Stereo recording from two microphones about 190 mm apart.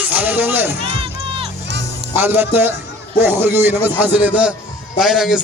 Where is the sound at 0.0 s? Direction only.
10° right (ahead or behind).